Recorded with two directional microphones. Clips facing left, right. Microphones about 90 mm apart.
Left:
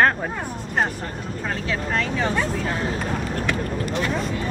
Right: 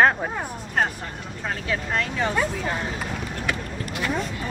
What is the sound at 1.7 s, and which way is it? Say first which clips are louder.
Speech: left 1 dB; centre (ahead or behind).